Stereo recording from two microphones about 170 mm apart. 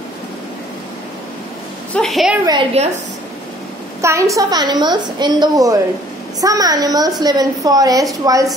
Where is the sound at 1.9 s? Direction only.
Centre (ahead or behind).